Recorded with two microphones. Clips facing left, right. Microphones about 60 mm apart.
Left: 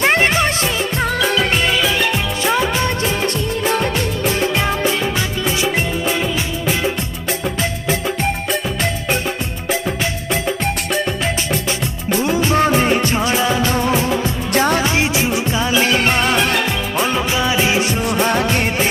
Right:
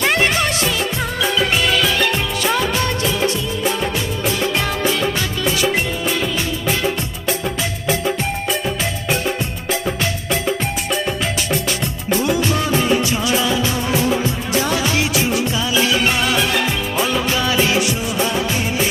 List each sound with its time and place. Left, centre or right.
0.0 s music: left
1.6 s music: centre
2.7 s music: left
3.7 s music: left
4.5 s music: left
12.2 s music: left
14.8 s music: left
17.0 s music: centre
18.0 s music of bollywood: left